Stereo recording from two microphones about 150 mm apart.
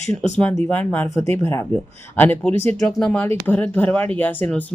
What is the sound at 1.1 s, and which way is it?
Speech, 20° left (ahead or behind).